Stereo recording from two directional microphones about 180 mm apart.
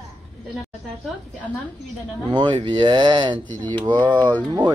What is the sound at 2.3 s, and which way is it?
A man's voice, 25° right (ahead or behind).